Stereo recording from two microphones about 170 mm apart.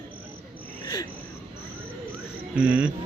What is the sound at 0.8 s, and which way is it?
Cricket, 25° left (ahead or behind).